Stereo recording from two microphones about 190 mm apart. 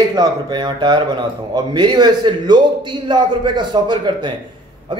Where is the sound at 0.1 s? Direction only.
20° right (ahead or behind).